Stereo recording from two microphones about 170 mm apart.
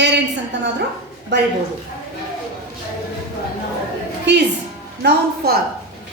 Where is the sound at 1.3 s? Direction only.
90° right.